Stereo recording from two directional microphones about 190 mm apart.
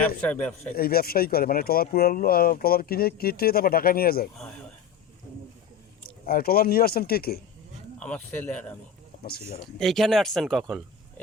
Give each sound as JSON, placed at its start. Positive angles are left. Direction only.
{"t": 0.2, "sound": "speech", "side_deg": 10}
{"t": 0.8, "sound": "speech", "side_deg": 55}
{"t": 4.4, "sound": "speech", "side_deg": 5}
{"t": 6.2, "sound": "speech", "side_deg": 50}
{"t": 7.9, "sound": "speech", "side_deg": 5}
{"t": 9.1, "sound": "a sound", "side_deg": 40}
{"t": 9.7, "sound": "speech", "side_deg": 0}